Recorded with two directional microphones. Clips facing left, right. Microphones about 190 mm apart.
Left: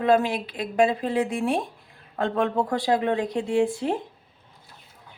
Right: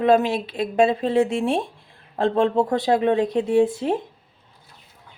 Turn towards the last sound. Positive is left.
turn(degrees=-20)  # may be behind; listen again after turning